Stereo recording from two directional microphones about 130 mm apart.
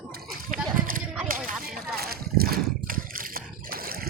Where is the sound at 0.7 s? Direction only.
90° right.